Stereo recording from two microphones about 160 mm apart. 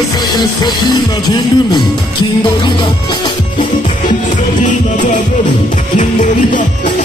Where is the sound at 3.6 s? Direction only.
50° left (ahead or behind).